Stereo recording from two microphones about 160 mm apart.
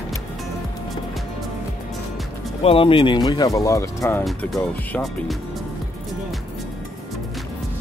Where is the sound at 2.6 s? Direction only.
35° left (ahead or behind); by 4.2 s 15° left (ahead or behind).